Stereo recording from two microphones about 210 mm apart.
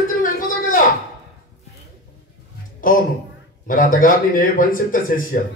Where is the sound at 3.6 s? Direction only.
40° left (ahead or behind).